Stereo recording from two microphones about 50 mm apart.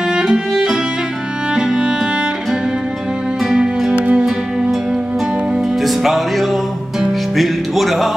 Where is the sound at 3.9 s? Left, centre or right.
Right.